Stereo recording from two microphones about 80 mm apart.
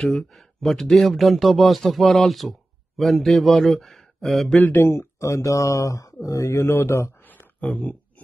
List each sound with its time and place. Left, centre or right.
0.0 s speech: centre
4.6 s speech: left
7.2 s a sound: centre